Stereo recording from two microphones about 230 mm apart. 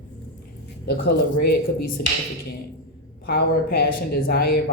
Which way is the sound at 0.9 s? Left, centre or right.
Left.